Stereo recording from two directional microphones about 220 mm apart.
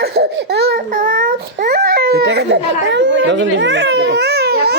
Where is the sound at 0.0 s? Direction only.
50° right (ahead or behind).